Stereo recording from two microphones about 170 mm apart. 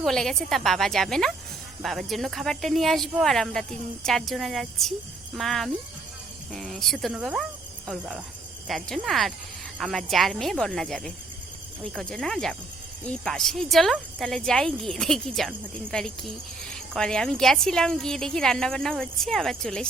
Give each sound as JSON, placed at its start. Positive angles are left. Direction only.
{"t": 0.0, "sound": "speech", "side_deg": 5}